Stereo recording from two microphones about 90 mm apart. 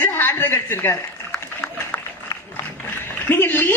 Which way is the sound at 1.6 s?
20° left (ahead or behind).